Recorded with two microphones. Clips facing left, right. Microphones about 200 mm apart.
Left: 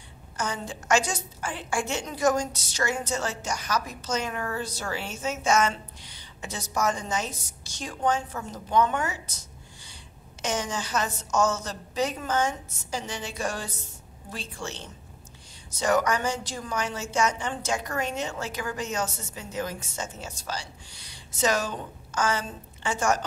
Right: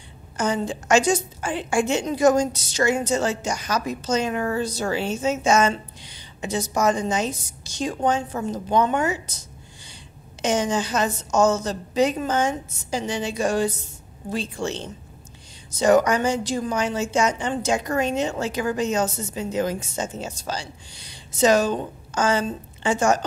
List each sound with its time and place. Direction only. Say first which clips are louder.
0.4 s a woman's voice: right 8 dB; 20° right (ahead or behind)
10.4 s a woman's voice: right 8 dB; 20° right (ahead or behind)
15.8 s a woman's voice: right 7 dB; 20° right (ahead or behind)